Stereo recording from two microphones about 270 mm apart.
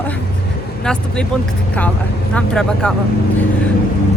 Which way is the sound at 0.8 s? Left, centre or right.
Centre.